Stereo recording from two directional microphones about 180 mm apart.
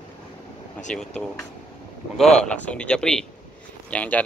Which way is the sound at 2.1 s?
Centre (ahead or behind).